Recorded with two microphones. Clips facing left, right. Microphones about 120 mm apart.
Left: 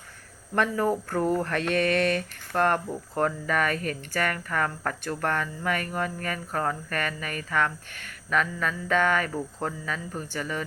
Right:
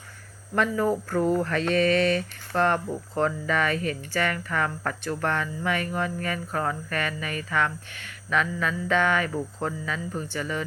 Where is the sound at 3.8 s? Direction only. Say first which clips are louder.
Right 2 dB; 50° left (ahead or behind).